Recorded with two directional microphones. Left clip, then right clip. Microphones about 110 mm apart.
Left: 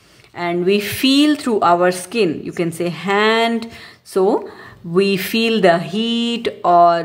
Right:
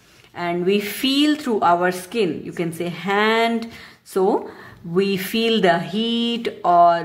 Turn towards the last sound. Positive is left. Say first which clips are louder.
# left 3 dB
turn(degrees=35)  # may be behind; listen again after turning